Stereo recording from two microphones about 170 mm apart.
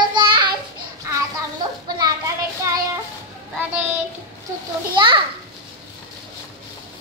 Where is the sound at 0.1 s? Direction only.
30° right (ahead or behind).